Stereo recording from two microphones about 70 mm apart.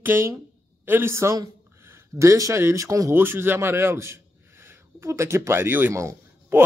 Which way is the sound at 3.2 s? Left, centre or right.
Right.